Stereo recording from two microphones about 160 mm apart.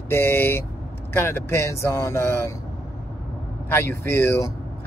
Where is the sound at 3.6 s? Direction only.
15° left (ahead or behind).